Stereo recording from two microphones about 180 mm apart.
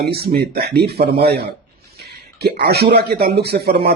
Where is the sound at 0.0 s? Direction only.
60° right (ahead or behind).